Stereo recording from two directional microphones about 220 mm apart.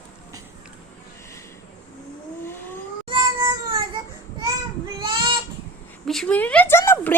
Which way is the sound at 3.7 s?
20° right (ahead or behind).